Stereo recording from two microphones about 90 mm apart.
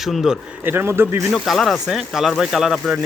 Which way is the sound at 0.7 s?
25° right (ahead or behind).